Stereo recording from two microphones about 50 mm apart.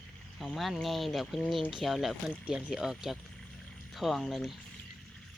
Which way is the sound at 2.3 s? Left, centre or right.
Centre.